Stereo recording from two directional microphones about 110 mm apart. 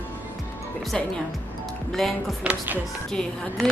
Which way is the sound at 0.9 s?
5° left (ahead or behind).